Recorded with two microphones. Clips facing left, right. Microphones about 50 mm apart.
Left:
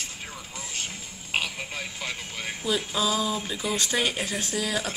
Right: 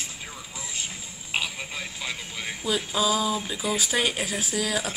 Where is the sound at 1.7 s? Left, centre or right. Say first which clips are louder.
Even; left.